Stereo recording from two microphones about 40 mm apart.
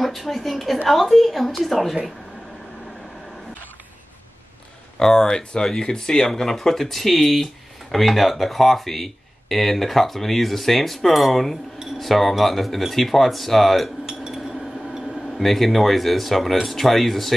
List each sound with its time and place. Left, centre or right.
0.0 s speech: centre
4.9 s speech: centre
14.0 s a sound: centre
15.2 s speech: centre